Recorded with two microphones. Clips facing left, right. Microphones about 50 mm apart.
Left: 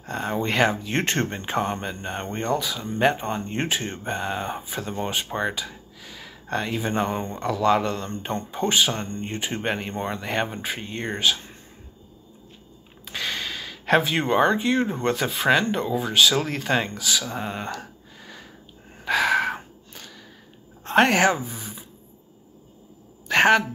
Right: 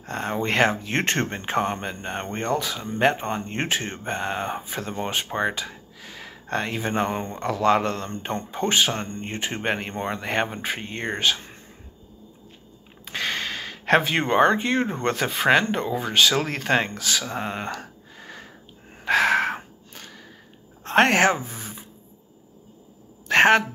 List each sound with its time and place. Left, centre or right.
0.1 s speech: right
6.9 s speech: right
8.1 s speech: right
13.0 s speech: right
17.3 s a sound: right
20.8 s speech: right
23.2 s a woman's voice: right